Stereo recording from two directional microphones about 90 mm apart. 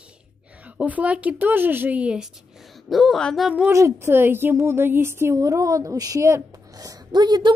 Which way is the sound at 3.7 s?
30° right (ahead or behind).